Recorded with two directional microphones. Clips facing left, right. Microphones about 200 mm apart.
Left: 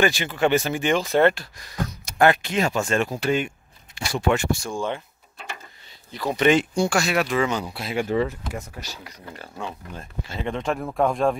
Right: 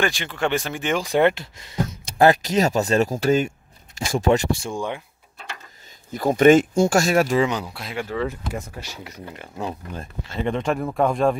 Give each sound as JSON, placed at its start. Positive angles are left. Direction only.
{"t": 0.0, "sound": "speech", "side_deg": 5}
{"t": 1.0, "sound": "speech", "side_deg": -15}
{"t": 4.7, "sound": "speech", "side_deg": -15}
{"t": 6.1, "sound": "speech", "side_deg": -50}
{"t": 7.9, "sound": "speech", "side_deg": 20}
{"t": 8.8, "sound": "speech", "side_deg": -25}
{"t": 10.2, "sound": "speech", "side_deg": 0}